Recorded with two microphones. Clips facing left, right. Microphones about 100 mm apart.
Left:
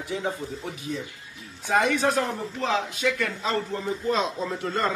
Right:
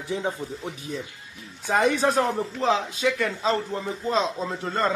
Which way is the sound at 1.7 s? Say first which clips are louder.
Right 1 dB; 35° right (ahead or behind).